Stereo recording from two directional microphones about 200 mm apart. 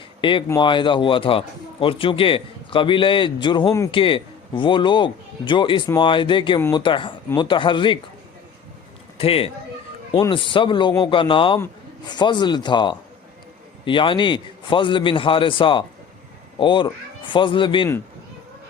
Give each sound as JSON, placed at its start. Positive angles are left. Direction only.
{"t": 0.2, "sound": "a man's voice", "side_deg": 25}
{"t": 9.1, "sound": "a man's voice", "side_deg": 30}